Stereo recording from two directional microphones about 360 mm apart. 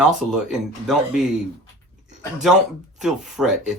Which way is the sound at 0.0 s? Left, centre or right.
Centre.